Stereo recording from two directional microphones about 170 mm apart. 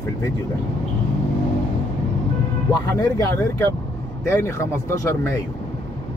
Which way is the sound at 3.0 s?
15° left (ahead or behind).